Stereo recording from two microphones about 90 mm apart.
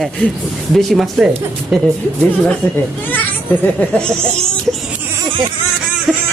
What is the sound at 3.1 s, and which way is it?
A child's voice, 20° left (ahead or behind).